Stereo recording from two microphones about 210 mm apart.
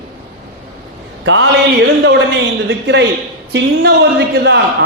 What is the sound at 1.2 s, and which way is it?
A man's voice, 60° right (ahead or behind).